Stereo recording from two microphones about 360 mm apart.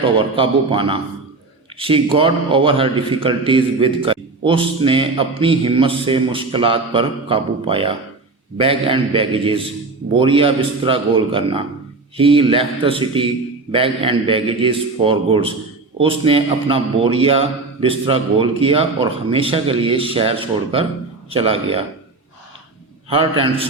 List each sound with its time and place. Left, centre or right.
0.0 s a man's voice: centre
23.0 s a man's voice: centre